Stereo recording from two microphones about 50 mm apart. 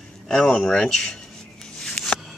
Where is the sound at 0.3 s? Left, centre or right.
Centre.